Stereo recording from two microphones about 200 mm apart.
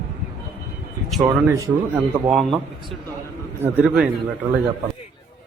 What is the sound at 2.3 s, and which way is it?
Speech, centre (ahead or behind).